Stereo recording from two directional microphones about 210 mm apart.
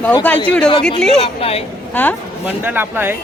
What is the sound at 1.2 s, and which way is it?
Speech, 30° left (ahead or behind).